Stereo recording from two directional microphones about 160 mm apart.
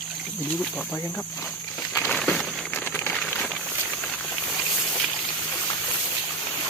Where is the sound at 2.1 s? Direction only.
Centre (ahead or behind).